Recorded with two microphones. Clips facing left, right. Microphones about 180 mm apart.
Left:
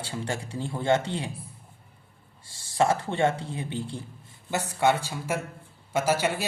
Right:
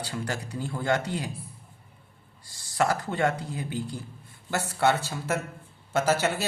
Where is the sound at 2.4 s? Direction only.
25° left (ahead or behind).